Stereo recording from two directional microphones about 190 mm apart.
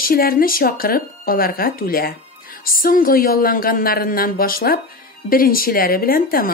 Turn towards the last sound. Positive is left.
turn(degrees=50)  # may be behind; listen again after turning